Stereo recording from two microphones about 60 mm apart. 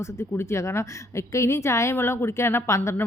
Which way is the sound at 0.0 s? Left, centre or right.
Left.